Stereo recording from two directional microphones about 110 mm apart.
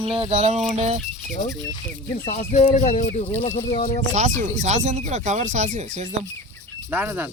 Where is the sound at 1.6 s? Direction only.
40° left (ahead or behind).